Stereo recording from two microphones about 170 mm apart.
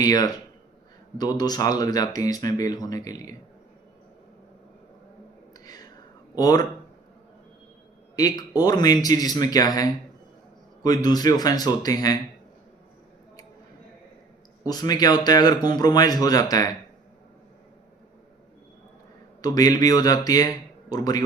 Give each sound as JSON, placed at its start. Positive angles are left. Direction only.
{"t": 0.0, "sound": "speech", "side_deg": 20}
{"t": 6.3, "sound": "speech", "side_deg": 20}
{"t": 8.1, "sound": "speech", "side_deg": 20}
{"t": 14.6, "sound": "speech", "side_deg": 20}
{"t": 19.4, "sound": "speech", "side_deg": 20}